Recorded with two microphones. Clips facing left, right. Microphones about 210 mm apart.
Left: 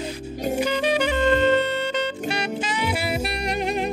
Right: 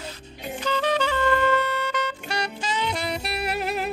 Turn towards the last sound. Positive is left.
turn(degrees=-5)  # may be behind; listen again after turning